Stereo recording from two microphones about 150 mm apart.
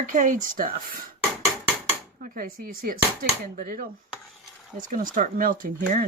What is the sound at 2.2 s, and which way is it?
Speech, 70° right (ahead or behind).